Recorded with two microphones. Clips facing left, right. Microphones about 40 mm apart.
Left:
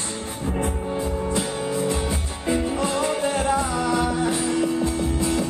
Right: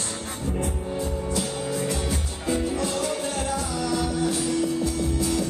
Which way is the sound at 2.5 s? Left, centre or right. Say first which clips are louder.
Left 3 dB; left.